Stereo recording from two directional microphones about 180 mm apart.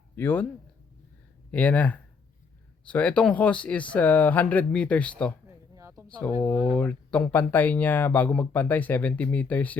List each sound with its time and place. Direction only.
0.2 s speech: 10° left (ahead or behind)
1.5 s speech: 5° left (ahead or behind)
5.5 s a sound: 15° right (ahead or behind)
6.1 s speech: 5° left (ahead or behind)